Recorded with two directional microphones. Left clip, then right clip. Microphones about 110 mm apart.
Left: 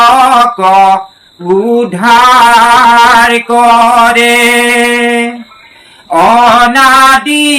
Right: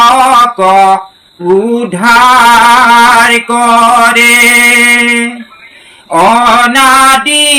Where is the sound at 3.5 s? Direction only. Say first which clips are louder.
Left 3 dB; 30° right (ahead or behind).